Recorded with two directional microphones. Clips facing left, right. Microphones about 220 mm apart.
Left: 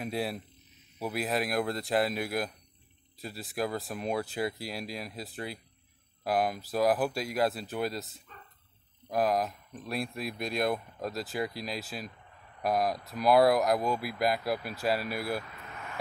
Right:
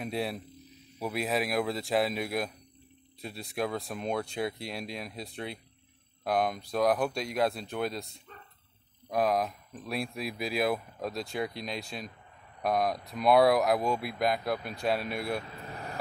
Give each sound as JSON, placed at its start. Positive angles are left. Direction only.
{"t": 0.0, "sound": "speech", "side_deg": 0}
{"t": 15.5, "sound": "vehicle", "side_deg": -35}